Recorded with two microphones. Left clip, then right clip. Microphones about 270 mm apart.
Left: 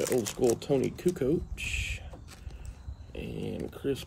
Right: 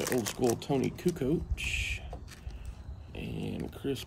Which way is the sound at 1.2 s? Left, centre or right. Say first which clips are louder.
Left 3 dB; centre.